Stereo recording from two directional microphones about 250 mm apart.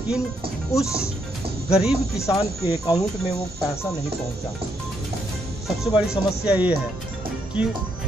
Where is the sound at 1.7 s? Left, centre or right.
Centre.